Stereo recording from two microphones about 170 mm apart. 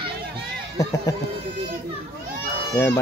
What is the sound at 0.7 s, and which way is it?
Speech, 20° left (ahead or behind).